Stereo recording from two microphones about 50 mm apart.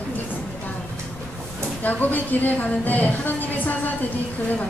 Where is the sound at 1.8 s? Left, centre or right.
Left.